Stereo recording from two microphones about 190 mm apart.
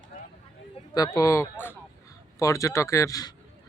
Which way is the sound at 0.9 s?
20° left (ahead or behind).